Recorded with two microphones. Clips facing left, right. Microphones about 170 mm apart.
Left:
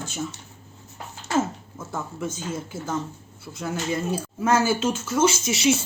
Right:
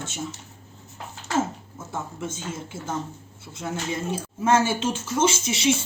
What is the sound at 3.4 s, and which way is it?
Speech, 25° right (ahead or behind).